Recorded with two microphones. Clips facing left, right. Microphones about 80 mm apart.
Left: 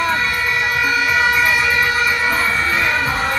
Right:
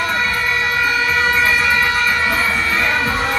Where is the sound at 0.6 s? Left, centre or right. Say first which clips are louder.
Left 1 dB; centre.